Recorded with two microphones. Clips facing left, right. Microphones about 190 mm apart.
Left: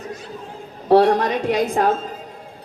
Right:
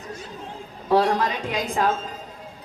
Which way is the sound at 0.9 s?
55° left (ahead or behind).